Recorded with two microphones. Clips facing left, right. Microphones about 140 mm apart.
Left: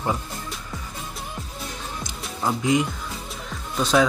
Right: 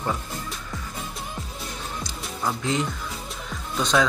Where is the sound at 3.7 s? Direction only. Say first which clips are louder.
Left 2 dB; 5° left (ahead or behind).